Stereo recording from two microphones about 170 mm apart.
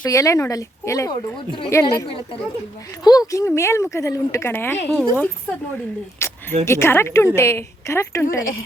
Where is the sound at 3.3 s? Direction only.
15° left (ahead or behind).